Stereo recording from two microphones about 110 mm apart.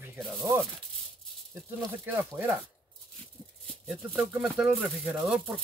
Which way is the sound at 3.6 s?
5° left (ahead or behind).